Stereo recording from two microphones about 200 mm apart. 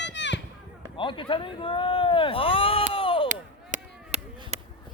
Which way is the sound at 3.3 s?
35° right (ahead or behind).